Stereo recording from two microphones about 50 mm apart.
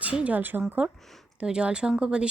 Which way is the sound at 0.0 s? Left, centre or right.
Right.